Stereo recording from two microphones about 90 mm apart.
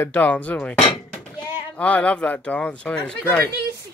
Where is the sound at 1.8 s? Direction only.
15° left (ahead or behind).